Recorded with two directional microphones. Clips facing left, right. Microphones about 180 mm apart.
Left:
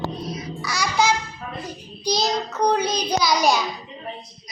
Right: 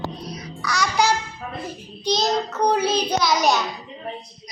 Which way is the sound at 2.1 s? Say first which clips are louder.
Right 1 dB; centre (ahead or behind).